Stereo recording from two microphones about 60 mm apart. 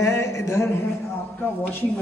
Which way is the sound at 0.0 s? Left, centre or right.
Left.